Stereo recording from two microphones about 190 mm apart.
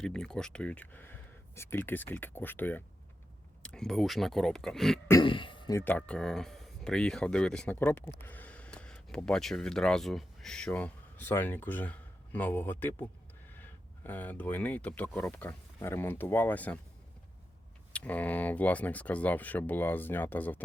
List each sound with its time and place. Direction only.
0.0 s speech: 5° left (ahead or behind)
5.2 s speech: 25° left (ahead or behind)
5.8 s speech: 5° left (ahead or behind)
17.9 s speech: 10° left (ahead or behind)